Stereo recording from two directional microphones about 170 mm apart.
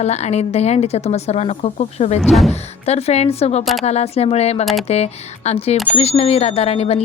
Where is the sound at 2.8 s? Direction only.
40° left (ahead or behind).